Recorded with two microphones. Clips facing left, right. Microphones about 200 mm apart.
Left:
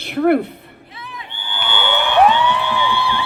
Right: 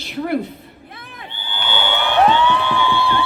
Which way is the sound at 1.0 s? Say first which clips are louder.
Left 5 dB; 50° right (ahead or behind).